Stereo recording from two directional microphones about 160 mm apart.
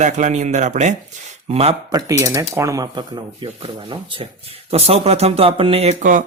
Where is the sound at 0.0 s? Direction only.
50° right (ahead or behind).